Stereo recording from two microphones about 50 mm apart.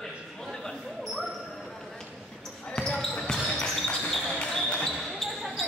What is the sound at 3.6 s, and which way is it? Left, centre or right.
Basketball bounce, centre.